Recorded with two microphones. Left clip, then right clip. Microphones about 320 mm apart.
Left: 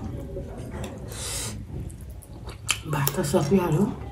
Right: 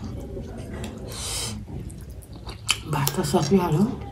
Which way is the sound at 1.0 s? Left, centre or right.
Centre.